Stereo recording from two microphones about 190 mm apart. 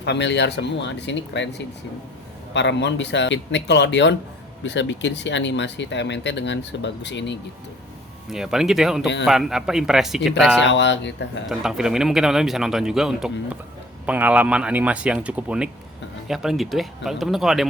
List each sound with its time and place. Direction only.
0.0 s speech: 65° left (ahead or behind)
8.3 s a man's voice: centre (ahead or behind)
10.6 s speech: 70° left (ahead or behind)
11.4 s a man's voice: centre (ahead or behind)